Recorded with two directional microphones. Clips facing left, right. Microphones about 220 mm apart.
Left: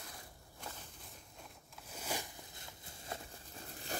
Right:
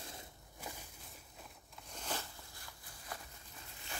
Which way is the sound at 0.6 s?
5° right (ahead or behind).